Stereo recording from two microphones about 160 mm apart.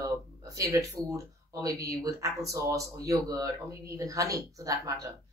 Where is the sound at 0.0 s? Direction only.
20° right (ahead or behind).